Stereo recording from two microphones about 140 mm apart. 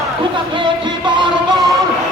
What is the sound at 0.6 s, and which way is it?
Music, 35° right (ahead or behind).